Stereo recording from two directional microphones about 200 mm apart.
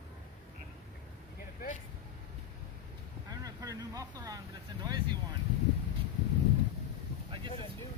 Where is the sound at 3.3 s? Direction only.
20° right (ahead or behind).